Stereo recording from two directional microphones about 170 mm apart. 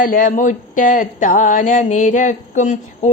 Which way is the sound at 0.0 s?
55° left (ahead or behind).